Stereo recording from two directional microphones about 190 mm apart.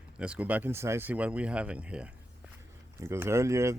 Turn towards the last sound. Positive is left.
turn(degrees=-15)  # may be behind; listen again after turning